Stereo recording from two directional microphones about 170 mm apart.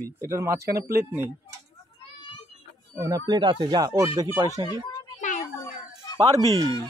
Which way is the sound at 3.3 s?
25° right (ahead or behind).